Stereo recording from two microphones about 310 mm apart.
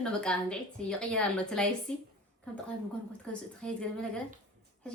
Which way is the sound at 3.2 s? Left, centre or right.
Centre.